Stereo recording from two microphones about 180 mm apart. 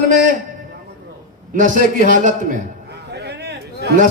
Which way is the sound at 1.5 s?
45° right (ahead or behind).